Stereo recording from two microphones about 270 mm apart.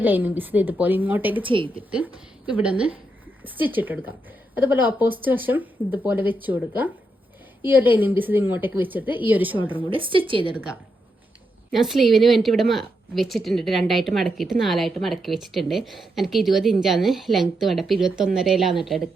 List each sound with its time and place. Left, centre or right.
0.0 s a woman's voice: centre
1.5 s a woman's voice: centre
2.5 s a woman's voice: centre
9.9 s a woman's voice: centre
11.7 s a woman's voice: centre